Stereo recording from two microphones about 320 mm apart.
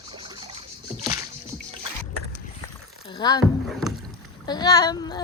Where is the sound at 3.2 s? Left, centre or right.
Centre.